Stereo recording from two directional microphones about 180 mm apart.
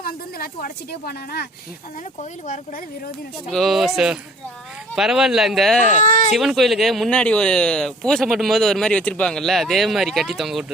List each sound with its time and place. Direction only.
0.0 s speech: 55° left (ahead or behind)
3.5 s speech: centre (ahead or behind)
5.9 s speech: 45° left (ahead or behind)
6.3 s speech: centre (ahead or behind)